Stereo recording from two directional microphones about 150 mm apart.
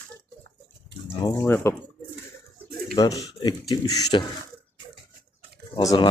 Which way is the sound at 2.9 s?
25° left (ahead or behind).